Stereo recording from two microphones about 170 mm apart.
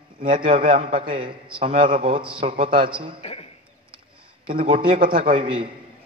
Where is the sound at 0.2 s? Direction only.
55° right (ahead or behind).